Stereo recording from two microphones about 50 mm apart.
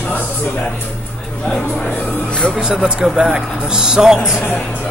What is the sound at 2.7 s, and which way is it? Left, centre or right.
A man's voice, centre.